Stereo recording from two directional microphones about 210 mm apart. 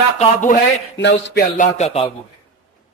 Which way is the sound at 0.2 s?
35° left (ahead or behind).